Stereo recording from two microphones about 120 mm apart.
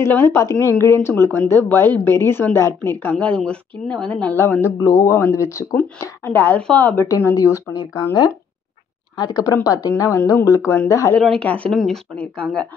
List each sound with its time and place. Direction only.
0.0 s speech: 20° left (ahead or behind)
0.6 s a woman's voice: 25° right (ahead or behind)
1.0 s a woman's voice: 20° left (ahead or behind)
4.4 s a woman's voice: 20° left (ahead or behind)
7.3 s speech: 30° left (ahead or behind)
11.1 s a woman's voice: 5° left (ahead or behind)